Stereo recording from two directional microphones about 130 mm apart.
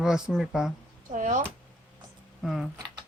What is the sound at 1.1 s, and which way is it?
Speech, 70° right (ahead or behind).